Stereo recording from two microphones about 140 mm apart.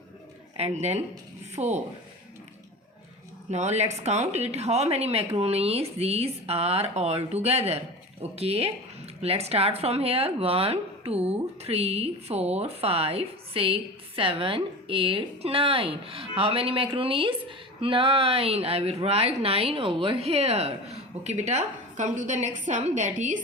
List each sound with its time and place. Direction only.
0.5 s speech: 50° right (ahead or behind)
3.5 s a woman's voice: 50° right (ahead or behind)